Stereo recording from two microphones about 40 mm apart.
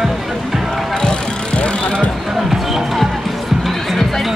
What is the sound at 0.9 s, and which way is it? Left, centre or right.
Vehicle, left.